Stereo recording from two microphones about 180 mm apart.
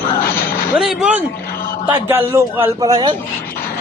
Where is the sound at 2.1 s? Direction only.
10° right (ahead or behind).